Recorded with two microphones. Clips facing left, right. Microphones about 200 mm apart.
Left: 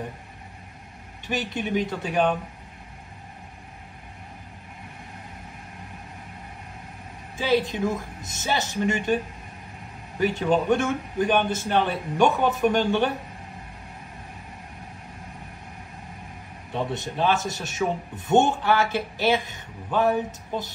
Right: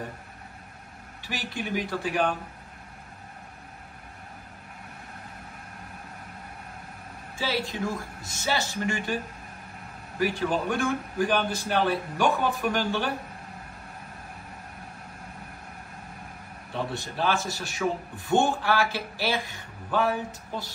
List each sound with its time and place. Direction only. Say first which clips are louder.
1.2 s a man's voice: left 5 dB; 20° left (ahead or behind)
7.3 s a man's voice: left 7 dB; 20° left (ahead or behind)
10.1 s a man's voice: left 4 dB; 20° left (ahead or behind)
16.9 s a man's voice: left 4 dB; 20° left (ahead or behind)